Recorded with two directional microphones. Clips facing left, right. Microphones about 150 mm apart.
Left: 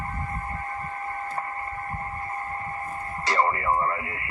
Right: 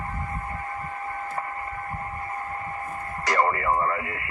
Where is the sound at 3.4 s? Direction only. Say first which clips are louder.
Right 1 dB; 20° left (ahead or behind).